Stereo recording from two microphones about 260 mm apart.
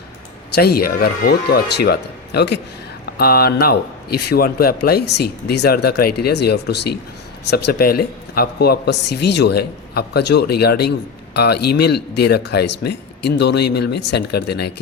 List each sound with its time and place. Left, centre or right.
0.5 s speech: left